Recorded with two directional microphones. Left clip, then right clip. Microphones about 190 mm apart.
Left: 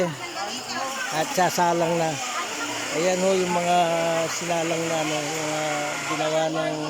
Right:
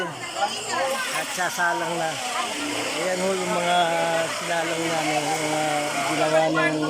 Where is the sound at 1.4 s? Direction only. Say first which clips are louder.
Left 3 dB; 25° left (ahead or behind).